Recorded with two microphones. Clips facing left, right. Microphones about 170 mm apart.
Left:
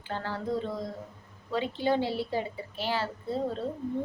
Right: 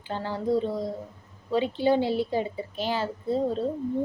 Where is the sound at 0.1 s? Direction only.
15° right (ahead or behind).